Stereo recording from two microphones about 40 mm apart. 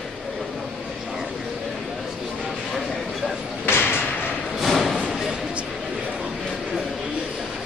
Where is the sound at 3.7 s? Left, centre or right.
Left.